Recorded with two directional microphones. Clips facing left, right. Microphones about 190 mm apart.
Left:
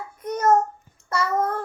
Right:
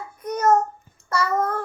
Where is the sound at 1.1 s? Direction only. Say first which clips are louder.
Right 1 dB; 20° left (ahead or behind).